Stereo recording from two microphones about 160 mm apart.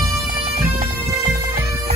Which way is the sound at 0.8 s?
60° right (ahead or behind).